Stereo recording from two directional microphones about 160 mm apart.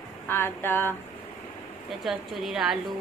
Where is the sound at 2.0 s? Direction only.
Centre (ahead or behind).